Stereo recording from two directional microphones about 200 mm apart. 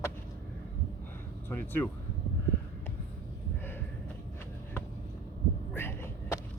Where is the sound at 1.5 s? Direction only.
10° left (ahead or behind).